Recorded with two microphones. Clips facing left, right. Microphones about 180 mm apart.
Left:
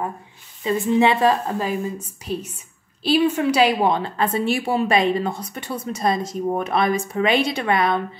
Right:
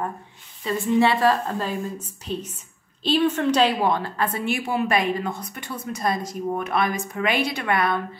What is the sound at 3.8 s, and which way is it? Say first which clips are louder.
A woman's voice: left 3 dB; 20° left (ahead or behind).